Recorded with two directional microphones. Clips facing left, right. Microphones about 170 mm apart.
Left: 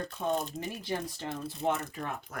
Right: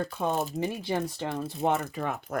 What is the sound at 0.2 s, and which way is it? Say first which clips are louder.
Speech: right 3 dB; 70° right (ahead or behind).